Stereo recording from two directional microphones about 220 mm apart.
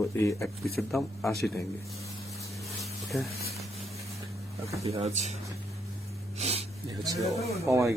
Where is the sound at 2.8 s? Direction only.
Centre (ahead or behind).